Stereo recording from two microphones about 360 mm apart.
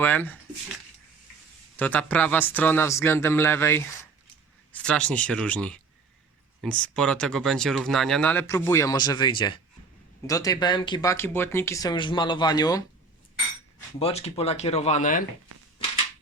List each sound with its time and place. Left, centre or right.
0.0 s speech: centre
1.7 s speech: centre
14.0 s speech: centre